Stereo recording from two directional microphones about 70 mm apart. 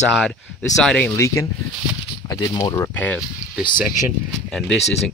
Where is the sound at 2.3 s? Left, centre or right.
Left.